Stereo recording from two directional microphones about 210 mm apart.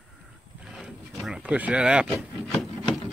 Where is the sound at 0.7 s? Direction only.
Centre (ahead or behind).